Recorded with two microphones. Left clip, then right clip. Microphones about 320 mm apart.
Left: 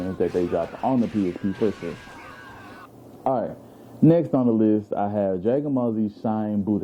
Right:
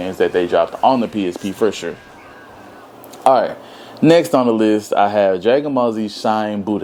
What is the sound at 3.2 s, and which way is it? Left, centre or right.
Speech, centre.